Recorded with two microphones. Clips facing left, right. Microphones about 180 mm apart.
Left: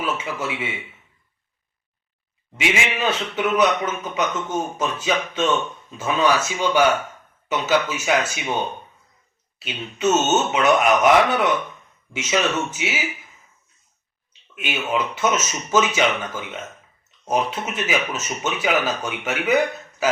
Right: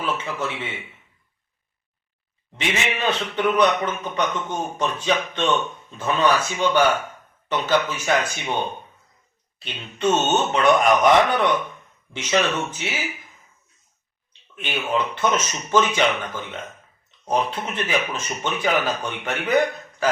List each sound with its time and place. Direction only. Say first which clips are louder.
0.0 s a man's voice: even; 10° left (ahead or behind)
2.6 s speech: left 2 dB; 10° left (ahead or behind)
9.6 s speech: left 1 dB; 5° left (ahead or behind)
14.5 s speech: even; 10° left (ahead or behind)